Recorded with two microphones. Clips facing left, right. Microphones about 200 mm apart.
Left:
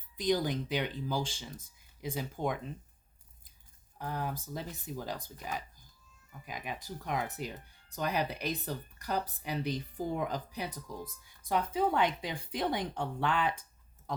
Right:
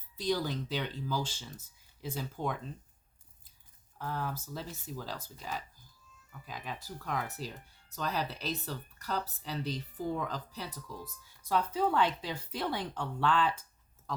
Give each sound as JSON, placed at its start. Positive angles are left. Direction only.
{"t": 0.2, "sound": "speech", "side_deg": 15}
{"t": 3.9, "sound": "speech", "side_deg": 15}